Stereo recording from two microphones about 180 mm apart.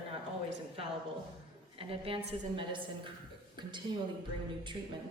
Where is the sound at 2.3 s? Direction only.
25° right (ahead or behind).